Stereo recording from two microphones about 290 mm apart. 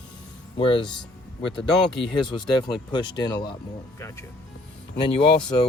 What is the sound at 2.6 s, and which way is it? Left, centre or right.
Speech, centre.